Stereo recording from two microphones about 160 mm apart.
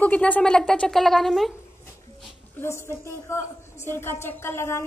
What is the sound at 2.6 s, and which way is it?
Speech, 15° left (ahead or behind).